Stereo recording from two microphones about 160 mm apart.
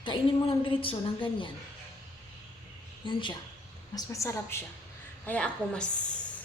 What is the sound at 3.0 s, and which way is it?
Speech, 30° left (ahead or behind).